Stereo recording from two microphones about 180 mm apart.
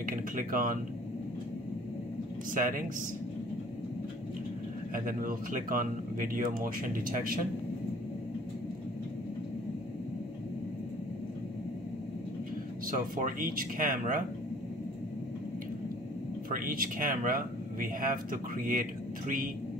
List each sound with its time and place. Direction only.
0.0 s speech: 50° right (ahead or behind)
2.5 s speech: 50° right (ahead or behind)
4.9 s speech: 50° right (ahead or behind)
12.9 s speech: 50° right (ahead or behind)
16.4 s speech: 50° right (ahead or behind)